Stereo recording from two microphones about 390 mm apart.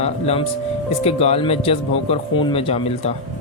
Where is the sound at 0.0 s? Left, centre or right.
Centre.